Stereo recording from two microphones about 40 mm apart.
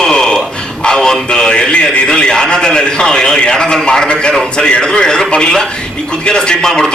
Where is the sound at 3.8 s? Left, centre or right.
Left.